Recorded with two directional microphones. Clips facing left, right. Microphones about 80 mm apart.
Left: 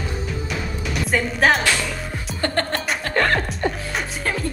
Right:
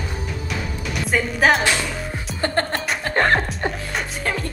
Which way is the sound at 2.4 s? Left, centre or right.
Right.